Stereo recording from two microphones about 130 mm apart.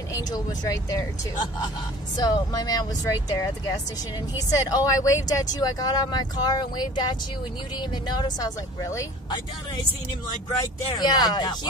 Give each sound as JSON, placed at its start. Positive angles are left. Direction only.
{"t": 0.1, "sound": "speech", "side_deg": 30}
{"t": 2.1, "sound": "speech", "side_deg": 30}
{"t": 8.2, "sound": "speech", "side_deg": 30}
{"t": 10.6, "sound": "speech", "side_deg": 30}